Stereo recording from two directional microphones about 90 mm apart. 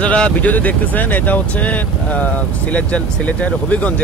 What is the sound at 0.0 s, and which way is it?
Speech, 15° left (ahead or behind).